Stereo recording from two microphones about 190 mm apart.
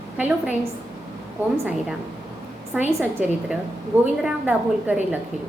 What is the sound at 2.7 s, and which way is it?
A woman's voice, 10° right (ahead or behind).